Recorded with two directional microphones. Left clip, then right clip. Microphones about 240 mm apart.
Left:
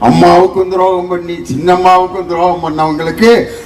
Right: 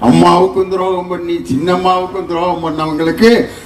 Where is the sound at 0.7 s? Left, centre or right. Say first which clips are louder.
Left 5 dB; left.